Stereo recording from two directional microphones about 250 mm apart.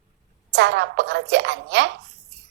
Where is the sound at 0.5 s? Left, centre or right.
Right.